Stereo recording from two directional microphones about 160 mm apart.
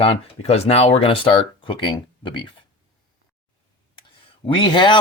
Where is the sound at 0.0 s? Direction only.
40° left (ahead or behind).